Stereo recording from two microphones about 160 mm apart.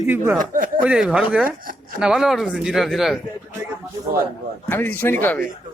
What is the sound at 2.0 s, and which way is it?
Speech, 5° right (ahead or behind).